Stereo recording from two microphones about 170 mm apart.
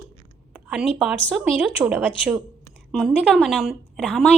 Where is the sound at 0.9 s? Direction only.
5° right (ahead or behind).